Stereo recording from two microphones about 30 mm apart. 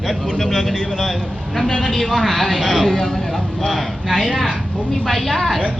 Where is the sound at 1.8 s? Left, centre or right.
Centre.